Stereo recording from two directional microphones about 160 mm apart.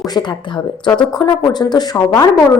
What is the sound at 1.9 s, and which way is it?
Speech, 15° left (ahead or behind).